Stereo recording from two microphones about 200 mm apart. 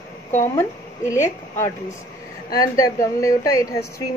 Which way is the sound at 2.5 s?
15° left (ahead or behind).